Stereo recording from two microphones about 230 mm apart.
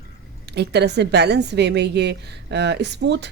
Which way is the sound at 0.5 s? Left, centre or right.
Right.